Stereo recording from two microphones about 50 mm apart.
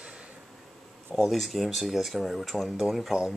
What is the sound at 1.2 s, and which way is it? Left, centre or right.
Speech, centre.